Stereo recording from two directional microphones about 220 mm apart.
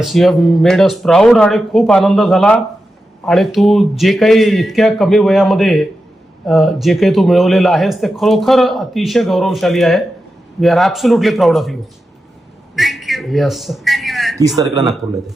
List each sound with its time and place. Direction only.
0.0 s a man's voice: centre (ahead or behind)
12.7 s a sound: centre (ahead or behind)
14.3 s speech: 15° right (ahead or behind)